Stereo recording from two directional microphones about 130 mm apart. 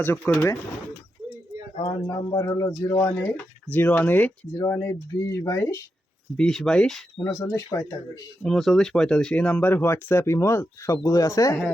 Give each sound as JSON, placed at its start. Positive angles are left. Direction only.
{"t": 0.0, "sound": "speech", "side_deg": 15}
{"t": 1.7, "sound": "speech", "side_deg": 45}
{"t": 2.0, "sound": "speech", "side_deg": 25}
{"t": 4.6, "sound": "speech", "side_deg": 25}
{"t": 6.3, "sound": "speech", "side_deg": 5}
{"t": 7.3, "sound": "speech", "side_deg": 25}
{"t": 8.4, "sound": "speech", "side_deg": 0}